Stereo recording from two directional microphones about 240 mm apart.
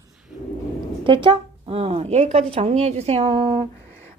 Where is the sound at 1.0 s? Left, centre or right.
Right.